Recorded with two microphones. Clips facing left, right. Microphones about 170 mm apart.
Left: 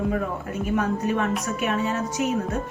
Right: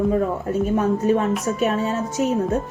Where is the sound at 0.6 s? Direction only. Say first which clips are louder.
Right 4 dB; 30° right (ahead or behind).